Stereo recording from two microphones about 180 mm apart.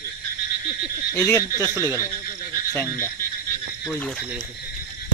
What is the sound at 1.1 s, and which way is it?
Speech, 15° left (ahead or behind).